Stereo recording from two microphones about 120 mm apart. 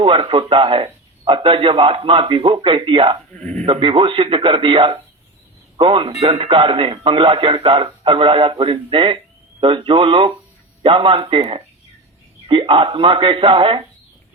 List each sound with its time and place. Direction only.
0.0 s a man's voice: 50° right (ahead or behind)
3.4 s speech: 10° left (ahead or behind)
3.7 s a man's voice: 45° right (ahead or behind)